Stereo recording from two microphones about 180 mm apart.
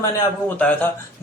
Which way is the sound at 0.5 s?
10° left (ahead or behind).